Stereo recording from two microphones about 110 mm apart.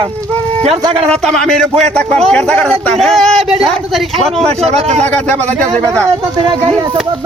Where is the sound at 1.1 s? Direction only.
5° left (ahead or behind).